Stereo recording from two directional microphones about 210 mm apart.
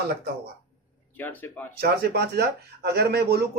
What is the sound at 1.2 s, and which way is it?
Speech, 10° left (ahead or behind).